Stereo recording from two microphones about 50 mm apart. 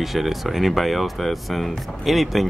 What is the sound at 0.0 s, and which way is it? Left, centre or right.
Speech, centre.